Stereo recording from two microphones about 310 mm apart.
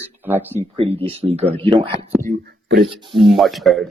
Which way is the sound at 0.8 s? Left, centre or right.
Centre.